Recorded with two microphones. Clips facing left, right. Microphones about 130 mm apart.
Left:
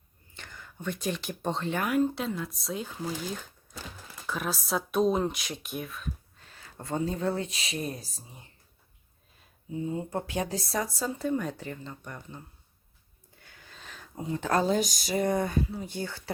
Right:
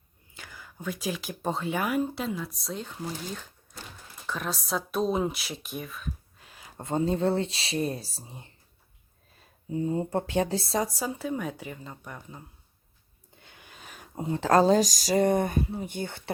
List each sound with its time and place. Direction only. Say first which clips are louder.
0.3 s speech: even; 5° right (ahead or behind)
4.3 s speech: even; 5° left (ahead or behind)
6.5 s speech: right 3 dB; 15° right (ahead or behind)
9.7 s speech: right 4 dB; 40° right (ahead or behind)
10.9 s a woman's voice: left 2 dB; 10° right (ahead or behind)
13.3 s a sound: right 1 dB; 20° right (ahead or behind)
14.2 s speech: right 5 dB; 30° right (ahead or behind)
14.9 s speech: right 5 dB; 90° right
15.3 s speech: right 2 dB; 25° right (ahead or behind)